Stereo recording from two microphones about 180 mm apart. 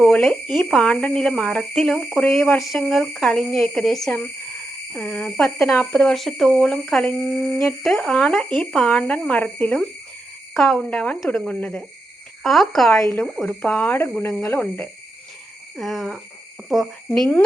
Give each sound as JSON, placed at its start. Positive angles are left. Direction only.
{"t": 0.0, "sound": "speech", "side_deg": 5}
{"t": 2.2, "sound": "speech", "side_deg": 10}
{"t": 2.7, "sound": "speech", "side_deg": 5}
{"t": 13.0, "sound": "speech", "side_deg": 15}
{"t": 13.2, "sound": "speech", "side_deg": 0}